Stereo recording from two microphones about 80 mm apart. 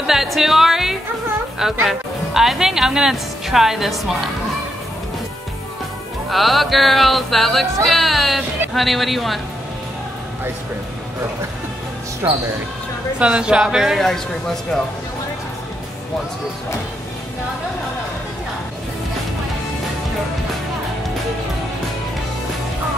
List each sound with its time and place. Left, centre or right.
0.0 s music: centre
6.3 s music: centre
12.2 s speech: right
13.2 s speech: centre
14.0 s music: centre